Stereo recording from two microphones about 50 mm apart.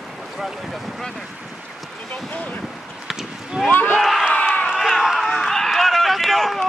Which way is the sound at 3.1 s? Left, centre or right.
Centre.